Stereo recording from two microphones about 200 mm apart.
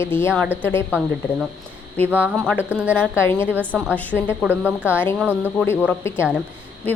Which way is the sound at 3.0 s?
10° left (ahead or behind).